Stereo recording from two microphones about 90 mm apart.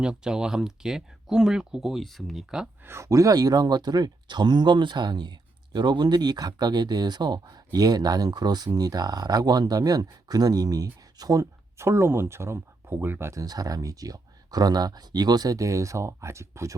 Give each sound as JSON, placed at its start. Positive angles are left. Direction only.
{"t": 0.0, "sound": "speech", "side_deg": -10}
{"t": 2.8, "sound": "speech", "side_deg": -30}
{"t": 13.4, "sound": "speech", "side_deg": -45}